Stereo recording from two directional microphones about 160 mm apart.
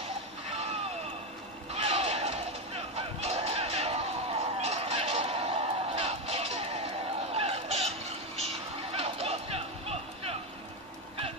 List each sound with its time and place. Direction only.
0.5 s a sound: 45° right (ahead or behind)
1.7 s music: 45° right (ahead or behind)
7.3 s vehicle: 40° right (ahead or behind)